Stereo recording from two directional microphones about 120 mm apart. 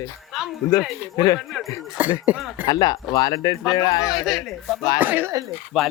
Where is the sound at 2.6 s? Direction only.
35° left (ahead or behind).